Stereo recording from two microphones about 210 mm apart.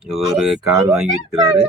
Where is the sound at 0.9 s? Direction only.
Centre (ahead or behind).